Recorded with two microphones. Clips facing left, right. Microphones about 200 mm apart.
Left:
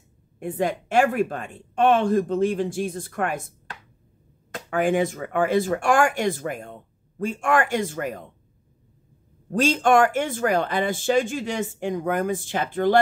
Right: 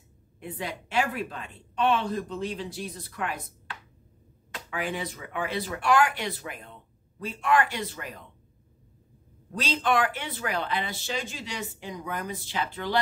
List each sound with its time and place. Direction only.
0.4 s speech: 50° left (ahead or behind)
9.5 s speech: 50° left (ahead or behind)